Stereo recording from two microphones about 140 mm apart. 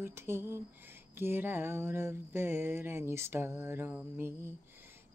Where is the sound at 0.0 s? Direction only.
15° right (ahead or behind).